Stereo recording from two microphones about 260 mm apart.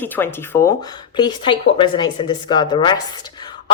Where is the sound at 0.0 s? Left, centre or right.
Centre.